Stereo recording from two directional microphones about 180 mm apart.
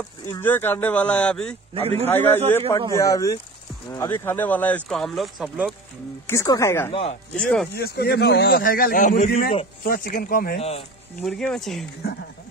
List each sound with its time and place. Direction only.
0.3 s speech: 10° left (ahead or behind)
1.7 s a man's voice: 35° right (ahead or behind)
2.0 s speech: 10° left (ahead or behind)
6.2 s speech: 20° left (ahead or behind)
6.9 s speech: 30° left (ahead or behind)
7.3 s speech: 5° left (ahead or behind)
7.7 s a man's voice: 65° left (ahead or behind)
10.6 s speech: 35° left (ahead or behind)
11.1 s speech: 5° left (ahead or behind)